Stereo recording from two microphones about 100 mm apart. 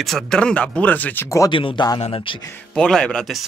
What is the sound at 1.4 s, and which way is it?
Speech, 55° left (ahead or behind).